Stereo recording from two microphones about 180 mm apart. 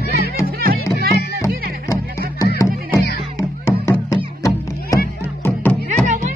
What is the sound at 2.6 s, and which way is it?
Music, 15° left (ahead or behind).